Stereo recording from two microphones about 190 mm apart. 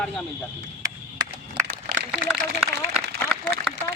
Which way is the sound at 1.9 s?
50° right (ahead or behind).